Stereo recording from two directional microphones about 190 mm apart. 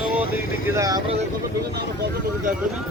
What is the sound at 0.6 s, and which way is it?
Speech, 15° right (ahead or behind).